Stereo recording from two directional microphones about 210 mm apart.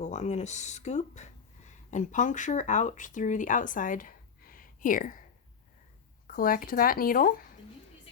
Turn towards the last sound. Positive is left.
turn(degrees=40)  # may be behind; listen again after turning